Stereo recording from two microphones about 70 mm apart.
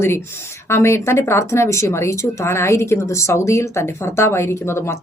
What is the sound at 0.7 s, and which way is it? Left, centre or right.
Speech, left.